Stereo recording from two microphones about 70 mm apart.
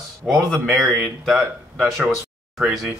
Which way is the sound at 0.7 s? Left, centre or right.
Centre.